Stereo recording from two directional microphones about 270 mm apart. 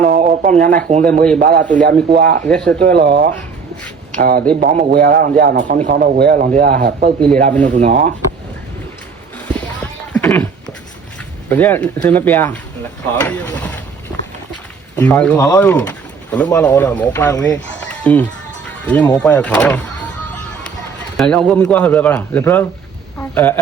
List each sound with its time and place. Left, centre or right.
0.0 s a man's voice: right
9.5 s a sound: centre
11.4 s speech: centre